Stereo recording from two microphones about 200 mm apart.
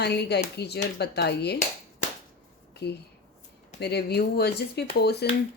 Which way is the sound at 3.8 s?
55° left (ahead or behind).